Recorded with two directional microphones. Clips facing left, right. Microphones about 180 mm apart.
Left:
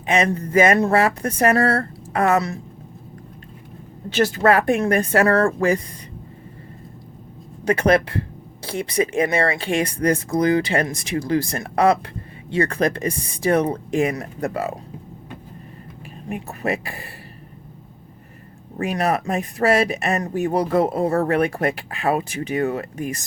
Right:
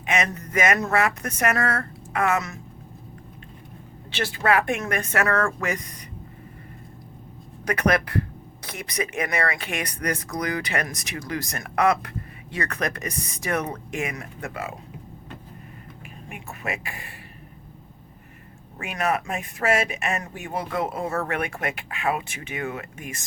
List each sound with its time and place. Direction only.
0.0 s speech: 30° left (ahead or behind)
4.1 s speech: 45° left (ahead or behind)
7.6 s speech: 30° left (ahead or behind)
16.3 s speech: 35° left (ahead or behind)
18.8 s speech: 35° left (ahead or behind)